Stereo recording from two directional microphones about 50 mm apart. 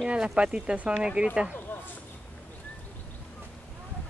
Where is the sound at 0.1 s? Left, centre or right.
Centre.